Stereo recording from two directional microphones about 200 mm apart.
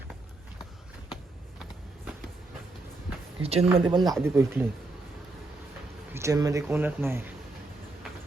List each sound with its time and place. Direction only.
3.4 s speech: 30° right (ahead or behind)
3.9 s speech: centre (ahead or behind)
4.2 s speech: 10° right (ahead or behind)
6.1 s speech: 15° right (ahead or behind)